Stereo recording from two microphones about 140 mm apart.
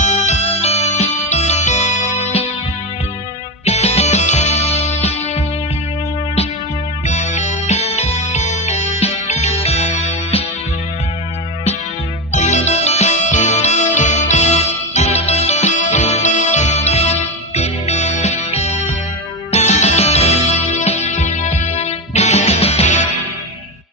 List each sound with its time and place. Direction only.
0.0 s music: 55° left (ahead or behind)
3.6 s music: 50° left (ahead or behind)
7.1 s music: 55° left (ahead or behind)
12.3 s music: 55° left (ahead or behind)